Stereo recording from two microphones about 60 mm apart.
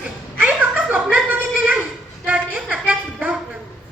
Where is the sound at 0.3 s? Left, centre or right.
Right.